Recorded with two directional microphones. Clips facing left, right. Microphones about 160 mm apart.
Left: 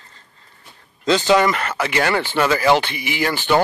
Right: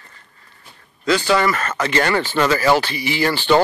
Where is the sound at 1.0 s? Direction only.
20° left (ahead or behind).